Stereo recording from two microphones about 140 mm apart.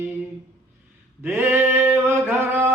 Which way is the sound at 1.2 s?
15° right (ahead or behind).